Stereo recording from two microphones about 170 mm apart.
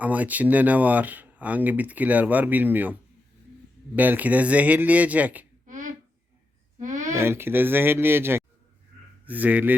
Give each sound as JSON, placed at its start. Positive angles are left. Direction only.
{"t": 0.0, "sound": "speech", "side_deg": -10}
{"t": 5.6, "sound": "a sound", "side_deg": -50}
{"t": 7.1, "sound": "speech", "side_deg": -15}